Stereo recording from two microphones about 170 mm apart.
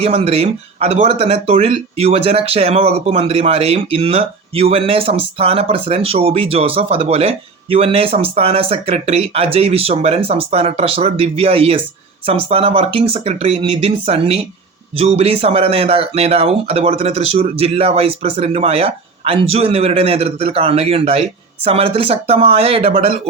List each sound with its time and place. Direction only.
0.0 s speech: 35° right (ahead or behind)